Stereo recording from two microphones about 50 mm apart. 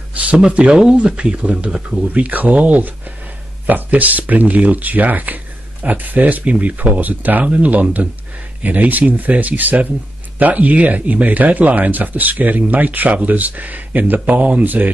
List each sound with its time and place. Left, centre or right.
0.1 s a sound: right
0.4 s speech: right
1.7 s speech: centre
2.1 s speech: right